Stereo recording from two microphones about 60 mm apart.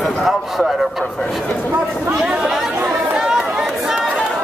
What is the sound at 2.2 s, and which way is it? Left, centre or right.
Chatter, centre.